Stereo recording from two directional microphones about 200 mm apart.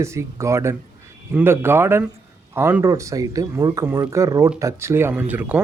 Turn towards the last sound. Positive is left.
turn(degrees=-10)  # may be behind; listen again after turning